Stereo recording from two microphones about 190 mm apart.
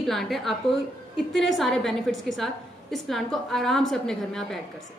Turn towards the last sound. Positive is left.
turn(degrees=0)  # may be behind; listen again after turning